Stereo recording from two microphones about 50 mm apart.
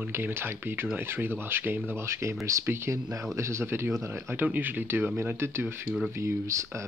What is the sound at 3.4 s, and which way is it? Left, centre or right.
Speech, right.